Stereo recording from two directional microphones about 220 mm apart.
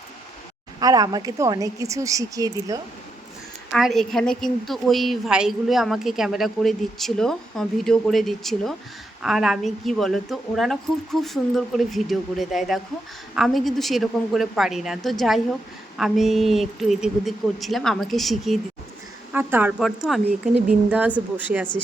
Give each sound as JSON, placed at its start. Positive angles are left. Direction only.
{"t": 0.8, "sound": "a woman's voice", "side_deg": -15}
{"t": 3.7, "sound": "a woman's voice", "side_deg": 0}